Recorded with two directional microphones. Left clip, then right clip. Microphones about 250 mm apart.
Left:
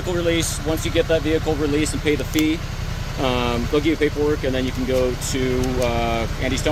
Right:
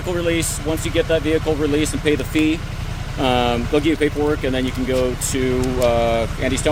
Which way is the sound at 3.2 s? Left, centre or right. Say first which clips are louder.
Right 4 dB; right.